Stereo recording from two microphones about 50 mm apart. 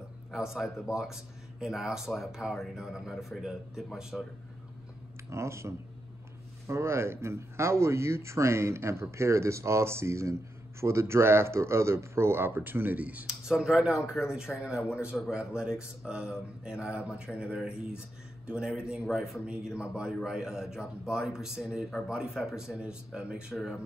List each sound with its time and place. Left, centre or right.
0.3 s speech: centre
4.1 s speech: centre
5.3 s speech: right
13.3 s speech: centre
19.4 s speech: centre
23.5 s speech: centre